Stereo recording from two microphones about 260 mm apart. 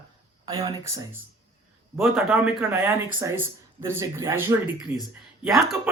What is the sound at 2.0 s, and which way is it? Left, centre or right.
Speech, centre.